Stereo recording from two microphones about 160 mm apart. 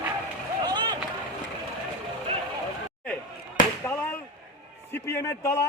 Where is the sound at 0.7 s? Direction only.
25° right (ahead or behind).